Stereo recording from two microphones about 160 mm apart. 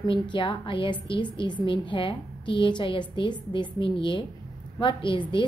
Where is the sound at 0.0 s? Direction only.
30° left (ahead or behind).